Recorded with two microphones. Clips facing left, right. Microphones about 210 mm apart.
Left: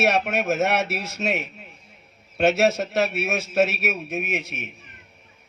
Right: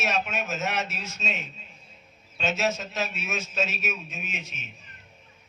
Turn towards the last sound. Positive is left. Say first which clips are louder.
# left 10 dB
turn(degrees=65)  # may be behind; listen again after turning